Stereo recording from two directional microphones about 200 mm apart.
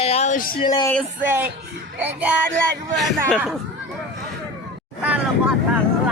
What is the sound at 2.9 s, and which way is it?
Speech, centre (ahead or behind).